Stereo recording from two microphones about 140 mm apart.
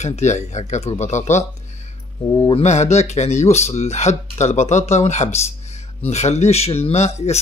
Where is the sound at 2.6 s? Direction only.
55° left (ahead or behind).